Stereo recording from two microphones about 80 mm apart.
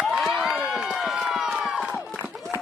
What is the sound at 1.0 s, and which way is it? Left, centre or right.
Run, centre.